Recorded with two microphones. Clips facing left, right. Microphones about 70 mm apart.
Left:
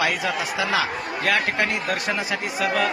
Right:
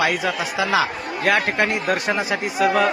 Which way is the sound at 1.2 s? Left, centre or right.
Centre.